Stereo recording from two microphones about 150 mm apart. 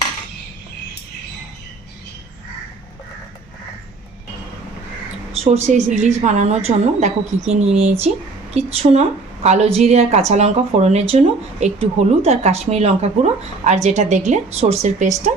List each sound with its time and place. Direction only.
5.3 s a woman's voice: 45° right (ahead or behind)